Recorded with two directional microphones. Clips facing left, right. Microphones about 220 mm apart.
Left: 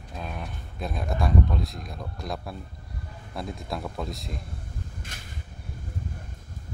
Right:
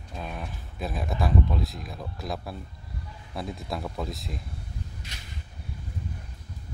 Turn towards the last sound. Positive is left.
turn(degrees=50)  # may be behind; listen again after turning